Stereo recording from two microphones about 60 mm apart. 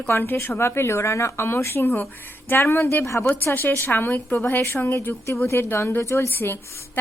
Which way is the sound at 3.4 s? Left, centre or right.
Left.